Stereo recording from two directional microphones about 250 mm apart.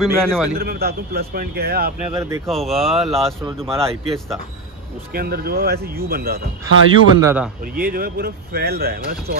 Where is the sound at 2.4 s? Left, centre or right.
Centre.